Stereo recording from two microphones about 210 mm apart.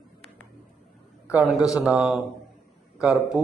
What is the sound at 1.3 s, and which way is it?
A man's voice, 5° right (ahead or behind).